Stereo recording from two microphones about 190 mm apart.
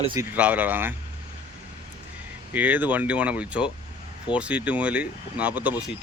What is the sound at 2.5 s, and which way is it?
Speech, 10° right (ahead or behind).